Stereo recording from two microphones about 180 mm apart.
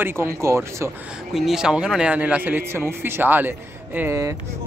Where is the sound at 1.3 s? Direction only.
Centre (ahead or behind).